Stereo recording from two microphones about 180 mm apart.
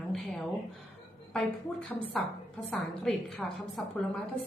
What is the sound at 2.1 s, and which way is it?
A woman's voice, centre (ahead or behind).